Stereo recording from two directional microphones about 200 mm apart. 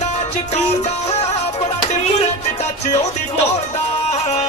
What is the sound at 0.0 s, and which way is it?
Music, 35° left (ahead or behind).